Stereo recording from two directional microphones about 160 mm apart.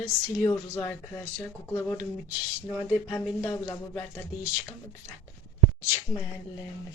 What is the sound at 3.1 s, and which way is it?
Speech, 15° left (ahead or behind).